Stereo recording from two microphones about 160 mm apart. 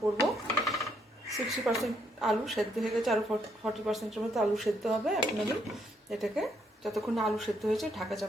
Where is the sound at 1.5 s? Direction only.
Centre (ahead or behind).